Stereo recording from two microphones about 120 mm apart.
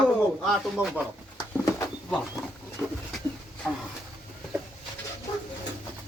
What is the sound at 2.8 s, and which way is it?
Speech, centre (ahead or behind).